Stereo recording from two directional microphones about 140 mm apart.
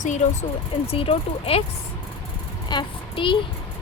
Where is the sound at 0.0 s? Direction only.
60° left (ahead or behind).